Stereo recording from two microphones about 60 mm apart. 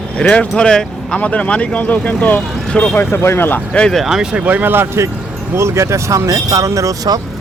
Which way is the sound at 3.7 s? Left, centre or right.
Centre.